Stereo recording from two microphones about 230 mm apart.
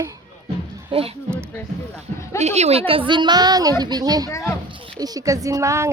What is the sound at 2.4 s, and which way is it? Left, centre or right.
A woman's voice, right.